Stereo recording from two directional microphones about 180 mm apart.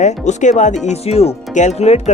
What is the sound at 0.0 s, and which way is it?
Speech, 40° left (ahead or behind).